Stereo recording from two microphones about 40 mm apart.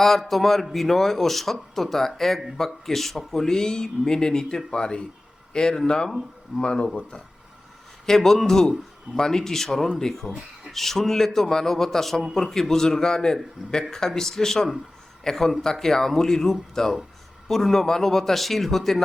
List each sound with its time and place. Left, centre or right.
0.0 s speech: centre; by 7.2 s left
8.0 s a man's voice: centre